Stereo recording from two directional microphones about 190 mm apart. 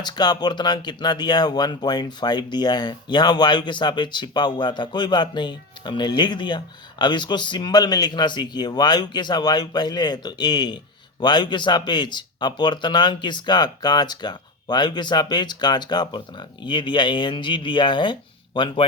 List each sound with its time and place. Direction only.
0.0 s speech: 20° left (ahead or behind)